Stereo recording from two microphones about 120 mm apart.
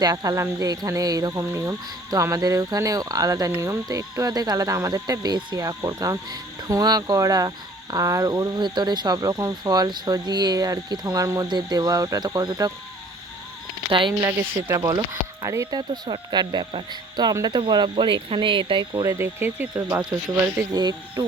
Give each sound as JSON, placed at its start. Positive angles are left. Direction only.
{"t": 0.0, "sound": "speech", "side_deg": -30}
{"t": 13.9, "sound": "speech", "side_deg": -45}
{"t": 14.3, "sound": "speech", "side_deg": -30}
{"t": 19.0, "sound": "speech", "side_deg": -20}
{"t": 20.7, "sound": "speech", "side_deg": -35}